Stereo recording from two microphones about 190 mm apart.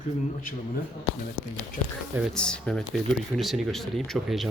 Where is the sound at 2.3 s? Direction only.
5° left (ahead or behind).